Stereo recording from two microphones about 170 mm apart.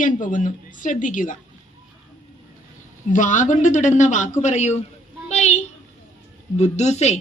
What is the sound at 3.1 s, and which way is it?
A woman's voice, 45° left (ahead or behind).